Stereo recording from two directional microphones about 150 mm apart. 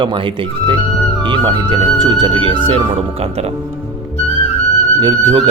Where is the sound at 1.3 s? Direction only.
35° right (ahead or behind).